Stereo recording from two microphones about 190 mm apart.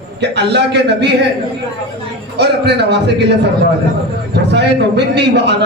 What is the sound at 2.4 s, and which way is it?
A man's voice, 65° right (ahead or behind).